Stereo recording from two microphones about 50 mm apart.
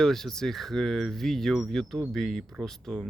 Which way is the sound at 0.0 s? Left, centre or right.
Centre.